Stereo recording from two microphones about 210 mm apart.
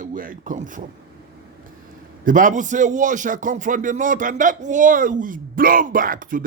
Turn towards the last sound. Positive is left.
turn(degrees=-40)  # may be behind; listen again after turning